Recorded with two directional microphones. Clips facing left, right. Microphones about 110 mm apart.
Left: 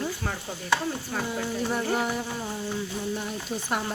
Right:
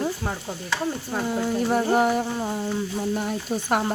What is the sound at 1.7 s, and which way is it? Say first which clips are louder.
Music: right 6 dB; 35° right (ahead or behind).